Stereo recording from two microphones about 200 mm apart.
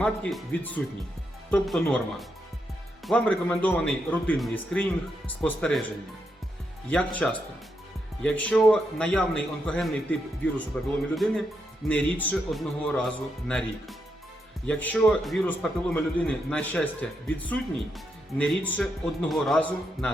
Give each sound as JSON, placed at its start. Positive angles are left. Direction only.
{"t": 0.0, "sound": "a man's voice", "side_deg": 5}
{"t": 6.9, "sound": "a man's voice", "side_deg": 5}